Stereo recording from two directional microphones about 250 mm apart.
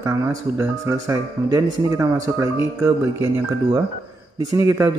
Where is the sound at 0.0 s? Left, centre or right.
Centre.